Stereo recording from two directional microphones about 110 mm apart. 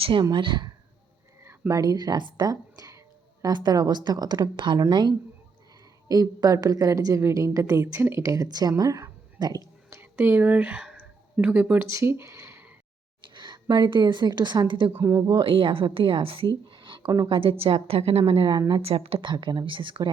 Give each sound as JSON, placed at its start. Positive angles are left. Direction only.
{"t": 0.0, "sound": "speech", "side_deg": -50}
{"t": 1.4, "sound": "a woman's voice", "side_deg": -25}
{"t": 8.8, "sound": "whispering", "side_deg": -35}
{"t": 10.0, "sound": "speech", "side_deg": -20}
{"t": 13.2, "sound": "a woman's voice", "side_deg": -45}
{"t": 14.9, "sound": "speech", "side_deg": -25}
{"t": 15.4, "sound": "a woman's voice", "side_deg": -55}